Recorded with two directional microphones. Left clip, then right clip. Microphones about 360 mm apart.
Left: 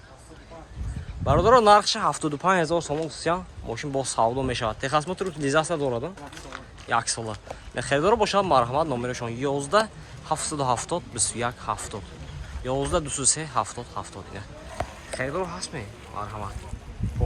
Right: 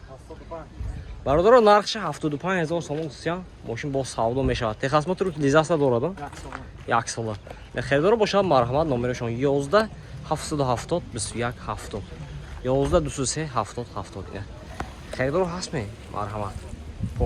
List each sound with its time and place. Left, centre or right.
1.2 s speech: centre
14.8 s a sound: left
15.1 s speech: centre